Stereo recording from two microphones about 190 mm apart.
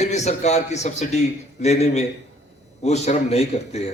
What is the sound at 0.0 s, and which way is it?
A man's voice, 35° left (ahead or behind).